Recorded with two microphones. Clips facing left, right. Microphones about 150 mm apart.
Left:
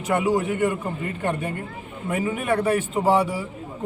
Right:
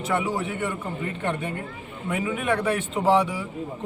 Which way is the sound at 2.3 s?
10° left (ahead or behind).